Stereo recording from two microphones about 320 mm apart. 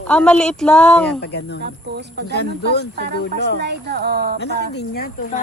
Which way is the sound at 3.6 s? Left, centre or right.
Right.